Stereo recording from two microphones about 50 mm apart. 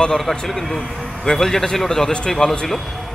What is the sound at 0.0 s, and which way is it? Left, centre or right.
A man's voice, centre.